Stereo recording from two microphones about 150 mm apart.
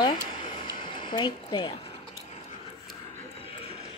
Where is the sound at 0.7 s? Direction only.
30° left (ahead or behind).